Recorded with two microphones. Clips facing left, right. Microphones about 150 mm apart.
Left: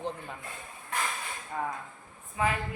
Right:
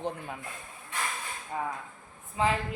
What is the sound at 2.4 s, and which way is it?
Speech, 25° right (ahead or behind).